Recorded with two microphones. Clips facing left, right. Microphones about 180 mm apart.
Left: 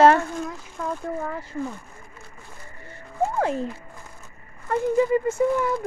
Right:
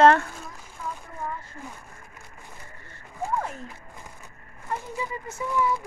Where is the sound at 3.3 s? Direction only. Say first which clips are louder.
Left 4 dB; 90° left.